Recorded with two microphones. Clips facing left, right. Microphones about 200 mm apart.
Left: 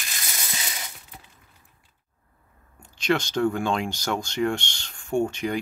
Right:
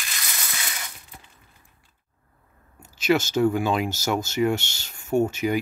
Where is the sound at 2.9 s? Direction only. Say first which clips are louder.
Right 3 dB; 5° right (ahead or behind).